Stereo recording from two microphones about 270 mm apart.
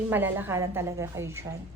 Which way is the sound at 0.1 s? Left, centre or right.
Centre.